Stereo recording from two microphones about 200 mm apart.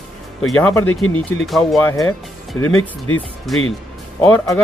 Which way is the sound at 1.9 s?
15° left (ahead or behind).